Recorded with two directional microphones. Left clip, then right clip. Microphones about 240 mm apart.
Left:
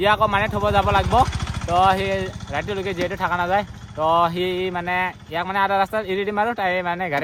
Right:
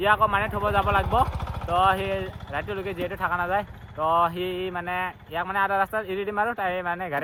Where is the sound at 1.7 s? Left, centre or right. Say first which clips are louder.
Left 4 dB; left.